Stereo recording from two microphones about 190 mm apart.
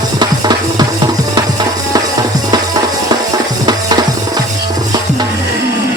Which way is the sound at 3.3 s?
20° right (ahead or behind).